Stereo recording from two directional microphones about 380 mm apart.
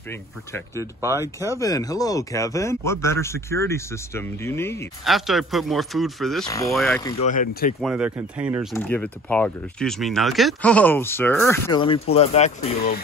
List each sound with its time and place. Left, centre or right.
0.7 s speech: centre
1.5 s speech: centre
7.2 s speech: left
7.8 s speech: centre; by 13.0 s left